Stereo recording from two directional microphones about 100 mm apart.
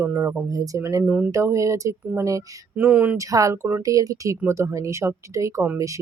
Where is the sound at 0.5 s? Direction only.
35° right (ahead or behind).